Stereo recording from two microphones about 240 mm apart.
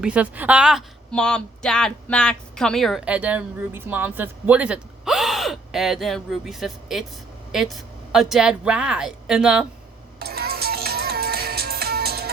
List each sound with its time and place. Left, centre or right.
0.0 s a woman's voice: centre
10.2 s music: right